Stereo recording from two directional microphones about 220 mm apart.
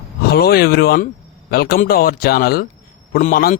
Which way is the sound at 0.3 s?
45° left (ahead or behind).